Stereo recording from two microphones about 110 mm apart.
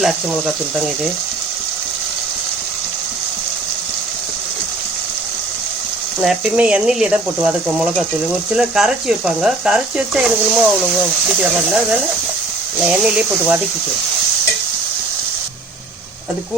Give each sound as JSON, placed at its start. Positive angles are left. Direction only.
{"t": 0.0, "sound": "speech", "side_deg": 0}
{"t": 6.1, "sound": "speech", "side_deg": -10}